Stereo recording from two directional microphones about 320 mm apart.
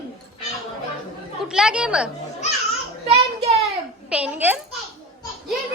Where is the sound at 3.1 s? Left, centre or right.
Centre.